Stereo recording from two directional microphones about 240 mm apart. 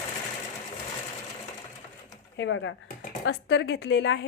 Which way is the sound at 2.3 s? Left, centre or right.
Left.